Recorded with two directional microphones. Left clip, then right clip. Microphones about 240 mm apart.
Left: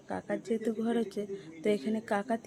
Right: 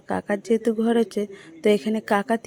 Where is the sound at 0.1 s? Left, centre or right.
Right.